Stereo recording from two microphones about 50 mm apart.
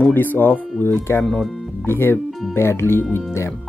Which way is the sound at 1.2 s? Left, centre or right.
Centre.